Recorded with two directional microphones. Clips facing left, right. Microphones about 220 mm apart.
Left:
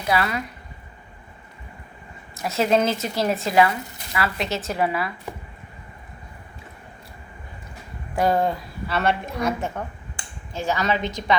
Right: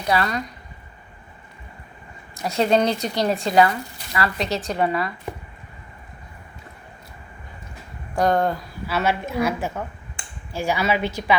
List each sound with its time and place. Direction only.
0.0 s speech: 5° left (ahead or behind)
2.3 s speech: centre (ahead or behind)
8.1 s a woman's voice: 5° left (ahead or behind)